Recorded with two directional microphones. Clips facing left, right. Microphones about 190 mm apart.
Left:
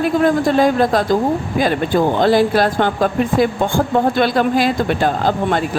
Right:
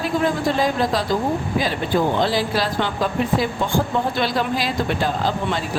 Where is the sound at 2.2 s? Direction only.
50° left (ahead or behind).